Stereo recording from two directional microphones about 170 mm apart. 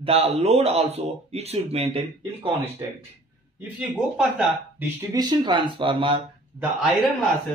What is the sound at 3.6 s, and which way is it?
Speech, 5° right (ahead or behind).